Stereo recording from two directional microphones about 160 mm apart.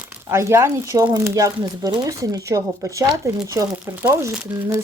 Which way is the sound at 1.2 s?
20° right (ahead or behind).